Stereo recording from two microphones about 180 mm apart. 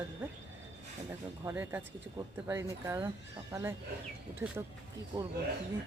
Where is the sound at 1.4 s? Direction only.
15° right (ahead or behind).